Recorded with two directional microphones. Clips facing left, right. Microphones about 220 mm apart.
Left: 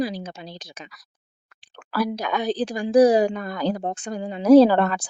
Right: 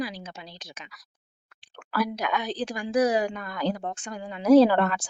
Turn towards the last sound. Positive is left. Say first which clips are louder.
# left 4 dB
turn(degrees=35)  # may be behind; listen again after turning